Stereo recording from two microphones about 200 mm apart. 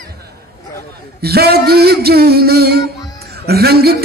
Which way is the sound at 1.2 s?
50° right (ahead or behind).